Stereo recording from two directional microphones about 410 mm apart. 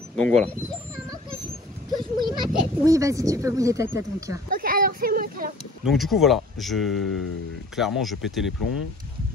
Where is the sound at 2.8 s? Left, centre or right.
Centre.